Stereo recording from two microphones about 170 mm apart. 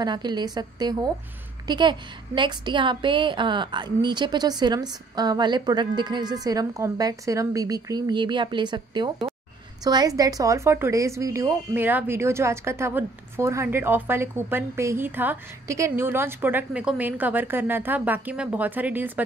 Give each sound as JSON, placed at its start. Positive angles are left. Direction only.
{"t": 0.0, "sound": "a woman's voice", "side_deg": -25}